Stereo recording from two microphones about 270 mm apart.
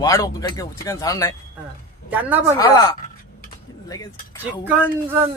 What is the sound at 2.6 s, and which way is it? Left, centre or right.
Speech, centre.